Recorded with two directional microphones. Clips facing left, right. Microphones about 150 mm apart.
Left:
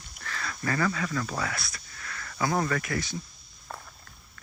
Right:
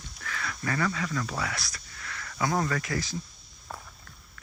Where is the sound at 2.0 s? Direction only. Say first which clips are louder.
Even; 30° left (ahead or behind).